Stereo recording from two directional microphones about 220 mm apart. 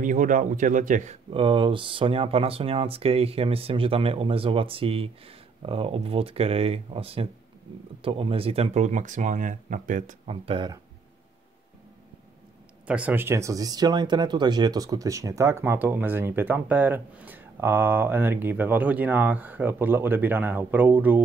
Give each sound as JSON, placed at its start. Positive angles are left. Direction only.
{"t": 0.0, "sound": "speech", "side_deg": -35}
{"t": 12.8, "sound": "speech", "side_deg": -5}